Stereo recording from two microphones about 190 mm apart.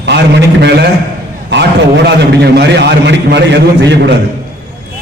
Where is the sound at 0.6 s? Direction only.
65° right (ahead or behind).